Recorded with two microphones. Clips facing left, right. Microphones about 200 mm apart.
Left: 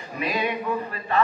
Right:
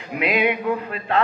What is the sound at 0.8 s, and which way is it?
Speech, 75° right (ahead or behind).